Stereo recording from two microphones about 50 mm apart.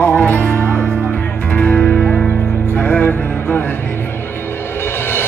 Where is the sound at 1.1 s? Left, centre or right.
Left.